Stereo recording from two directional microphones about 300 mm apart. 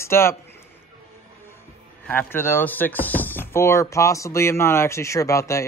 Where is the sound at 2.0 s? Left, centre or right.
Centre.